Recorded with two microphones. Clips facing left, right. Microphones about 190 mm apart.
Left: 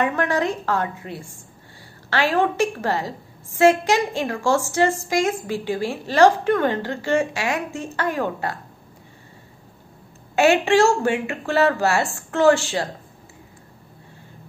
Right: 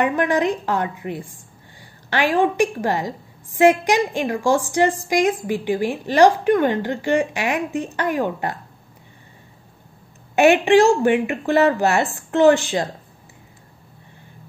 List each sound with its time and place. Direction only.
0.0 s a woman's voice: 15° right (ahead or behind)
10.3 s a woman's voice: 15° right (ahead or behind)